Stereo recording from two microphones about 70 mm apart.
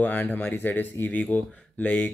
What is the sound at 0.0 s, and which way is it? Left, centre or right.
Speech, left.